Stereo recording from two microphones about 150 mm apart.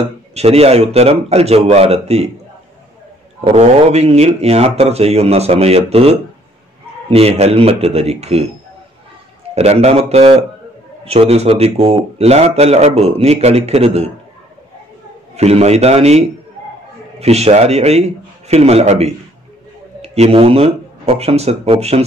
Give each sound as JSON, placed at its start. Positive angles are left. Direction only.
{"t": 0.3, "sound": "speech", "side_deg": -45}
{"t": 3.4, "sound": "speech", "side_deg": -45}
{"t": 9.6, "sound": "speech", "side_deg": -45}
{"t": 15.3, "sound": "speech", "side_deg": -45}